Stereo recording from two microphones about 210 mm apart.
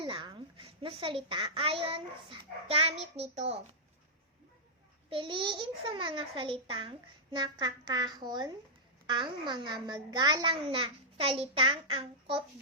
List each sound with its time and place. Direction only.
0.0 s a child's voice: 25° right (ahead or behind)
5.0 s a child's voice: 25° right (ahead or behind)